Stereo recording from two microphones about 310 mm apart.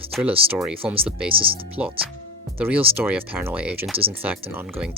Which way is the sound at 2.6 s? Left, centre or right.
Centre.